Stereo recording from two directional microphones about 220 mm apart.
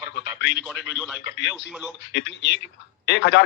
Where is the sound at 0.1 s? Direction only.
55° left (ahead or behind).